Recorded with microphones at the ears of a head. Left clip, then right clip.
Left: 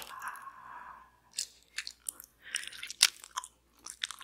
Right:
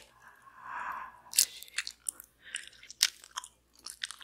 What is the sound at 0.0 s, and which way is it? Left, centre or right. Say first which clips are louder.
Squish: left 13 dB; left.